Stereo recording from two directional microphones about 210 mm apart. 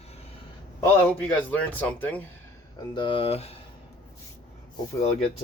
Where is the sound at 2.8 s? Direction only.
20° left (ahead or behind).